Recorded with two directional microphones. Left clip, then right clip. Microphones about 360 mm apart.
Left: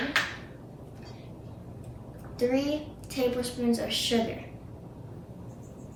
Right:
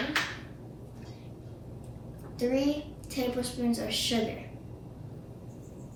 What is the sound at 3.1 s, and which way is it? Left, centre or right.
Speech, centre.